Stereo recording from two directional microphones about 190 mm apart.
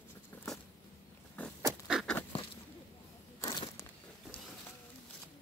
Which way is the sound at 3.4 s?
20° left (ahead or behind).